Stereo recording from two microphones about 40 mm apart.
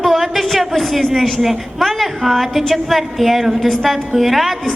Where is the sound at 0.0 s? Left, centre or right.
Centre.